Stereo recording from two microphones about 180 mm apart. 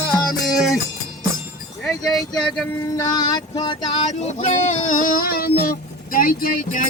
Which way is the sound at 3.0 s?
20° left (ahead or behind).